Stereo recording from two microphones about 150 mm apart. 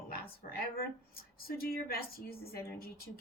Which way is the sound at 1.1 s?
85° left.